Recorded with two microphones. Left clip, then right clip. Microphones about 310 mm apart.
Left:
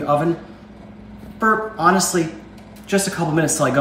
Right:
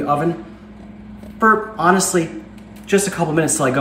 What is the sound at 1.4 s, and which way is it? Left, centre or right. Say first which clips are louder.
Speech: right 2 dB; centre.